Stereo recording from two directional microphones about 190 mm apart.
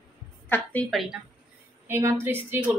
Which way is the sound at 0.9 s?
Centre (ahead or behind).